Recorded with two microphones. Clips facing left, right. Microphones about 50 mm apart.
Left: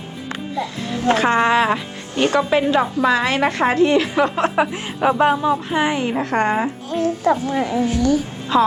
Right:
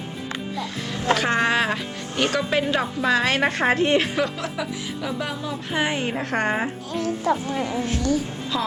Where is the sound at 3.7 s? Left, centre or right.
Right.